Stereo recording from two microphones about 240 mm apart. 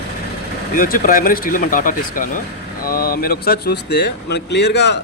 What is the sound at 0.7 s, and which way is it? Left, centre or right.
Speech, left.